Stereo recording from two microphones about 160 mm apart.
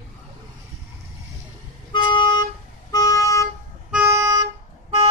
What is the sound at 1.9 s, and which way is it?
Toot, 30° left (ahead or behind).